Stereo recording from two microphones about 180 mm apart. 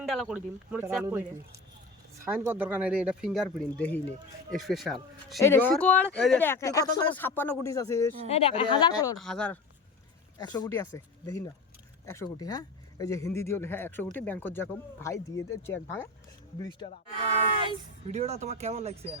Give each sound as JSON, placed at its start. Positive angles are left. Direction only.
{"t": 0.0, "sound": "speech", "side_deg": 0}
{"t": 2.2, "sound": "speech", "side_deg": -10}
{"t": 5.4, "sound": "speech", "side_deg": 10}
{"t": 8.3, "sound": "speech", "side_deg": 30}
{"t": 9.1, "sound": "speech", "side_deg": 5}
{"t": 10.3, "sound": "speech", "side_deg": 20}
{"t": 16.8, "sound": "speech", "side_deg": 30}
{"t": 18.1, "sound": "speech", "side_deg": -40}